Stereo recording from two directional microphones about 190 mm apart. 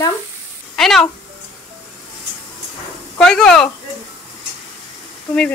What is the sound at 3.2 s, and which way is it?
Speech, 5° left (ahead or behind).